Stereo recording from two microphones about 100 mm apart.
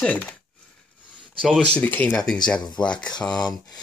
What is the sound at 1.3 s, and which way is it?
Speech, 5° left (ahead or behind).